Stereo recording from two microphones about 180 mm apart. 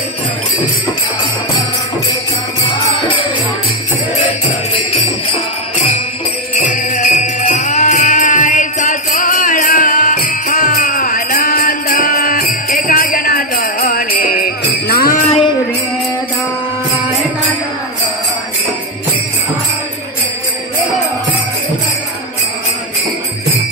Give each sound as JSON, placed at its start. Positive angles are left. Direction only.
{"t": 6.6, "sound": "music", "side_deg": 45}
{"t": 12.7, "sound": "jingle bell", "side_deg": 50}
{"t": 15.2, "sound": "music", "side_deg": 30}